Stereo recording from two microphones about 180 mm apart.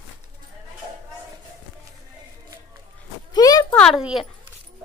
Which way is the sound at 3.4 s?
20° left (ahead or behind).